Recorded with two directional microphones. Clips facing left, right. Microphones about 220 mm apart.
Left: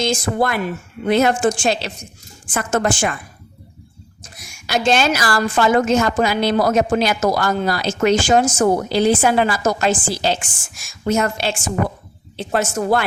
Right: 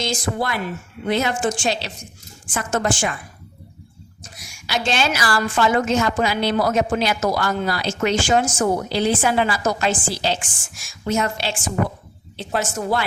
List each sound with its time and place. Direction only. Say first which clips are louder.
0.0 s a woman's voice: left 5 dB; 50° left (ahead or behind)
4.2 s a woman's voice: left 1 dB; 50° left (ahead or behind)